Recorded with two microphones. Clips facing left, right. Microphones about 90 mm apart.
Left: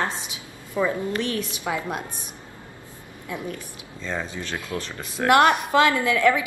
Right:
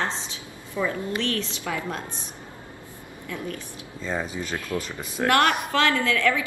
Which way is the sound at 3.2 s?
20° left (ahead or behind).